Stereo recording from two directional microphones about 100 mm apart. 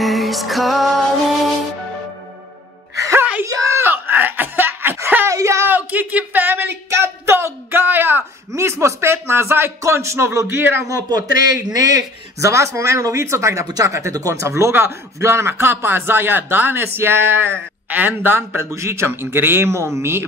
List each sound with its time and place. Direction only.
0.0 s music: centre (ahead or behind)
3.0 s music: 30° right (ahead or behind)
3.4 s a sound: 35° right (ahead or behind)
5.7 s a sound: 15° right (ahead or behind)
9.8 s a man's voice: 30° right (ahead or behind)
11.1 s a man's voice: 40° right (ahead or behind)